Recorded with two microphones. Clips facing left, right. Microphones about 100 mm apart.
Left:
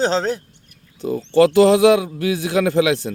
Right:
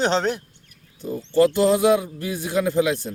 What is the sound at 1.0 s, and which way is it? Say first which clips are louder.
A man's voice: left 4 dB; 85° left.